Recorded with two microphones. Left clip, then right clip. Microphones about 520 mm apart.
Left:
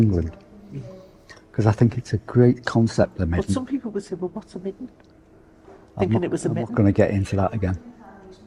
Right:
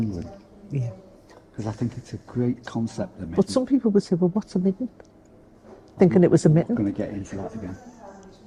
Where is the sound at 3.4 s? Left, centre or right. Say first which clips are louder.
Right 8 dB; right.